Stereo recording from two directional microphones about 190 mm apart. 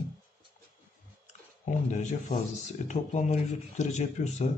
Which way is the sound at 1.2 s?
40° left (ahead or behind).